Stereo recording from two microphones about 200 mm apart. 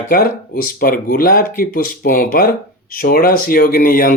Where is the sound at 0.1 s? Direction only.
45° left (ahead or behind).